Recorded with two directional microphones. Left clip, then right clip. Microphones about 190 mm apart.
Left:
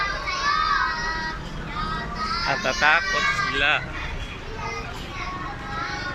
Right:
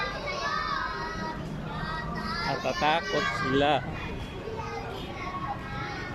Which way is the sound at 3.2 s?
30° right (ahead or behind).